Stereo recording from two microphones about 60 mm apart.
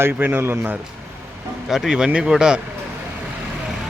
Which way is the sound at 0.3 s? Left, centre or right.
Right.